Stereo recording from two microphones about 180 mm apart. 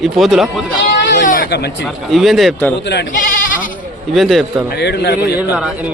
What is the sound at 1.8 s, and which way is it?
Speech, centre (ahead or behind).